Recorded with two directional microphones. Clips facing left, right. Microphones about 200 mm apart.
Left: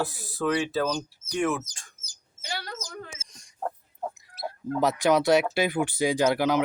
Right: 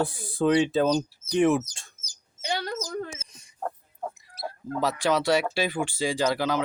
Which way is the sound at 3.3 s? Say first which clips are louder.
Left 2 dB; 5° right (ahead or behind).